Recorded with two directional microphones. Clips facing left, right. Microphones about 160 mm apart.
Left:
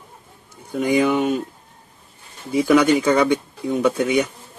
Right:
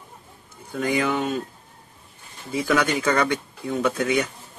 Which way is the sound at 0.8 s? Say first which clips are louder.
Left 5 dB; 20° left (ahead or behind).